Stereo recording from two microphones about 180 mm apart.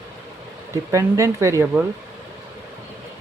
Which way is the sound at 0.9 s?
15° right (ahead or behind).